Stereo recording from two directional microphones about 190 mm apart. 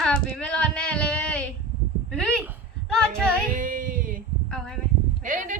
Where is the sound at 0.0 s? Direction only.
5° left (ahead or behind).